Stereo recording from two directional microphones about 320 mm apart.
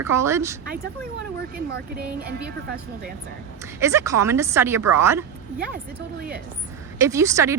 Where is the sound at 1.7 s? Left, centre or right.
Right.